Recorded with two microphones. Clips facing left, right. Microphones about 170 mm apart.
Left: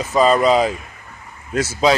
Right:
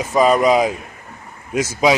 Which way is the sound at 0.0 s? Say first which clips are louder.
Even; 10° right (ahead or behind).